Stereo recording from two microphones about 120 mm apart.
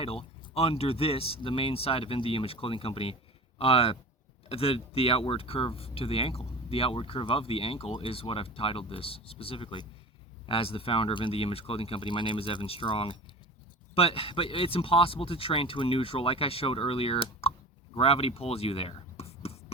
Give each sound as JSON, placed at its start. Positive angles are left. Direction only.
{"t": 0.0, "sound": "speech", "side_deg": 55}